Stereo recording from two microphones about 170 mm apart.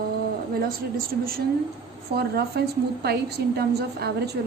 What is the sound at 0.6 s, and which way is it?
Speech, 60° right (ahead or behind).